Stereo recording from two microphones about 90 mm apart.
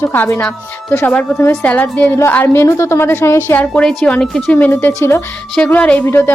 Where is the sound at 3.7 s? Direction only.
10° left (ahead or behind).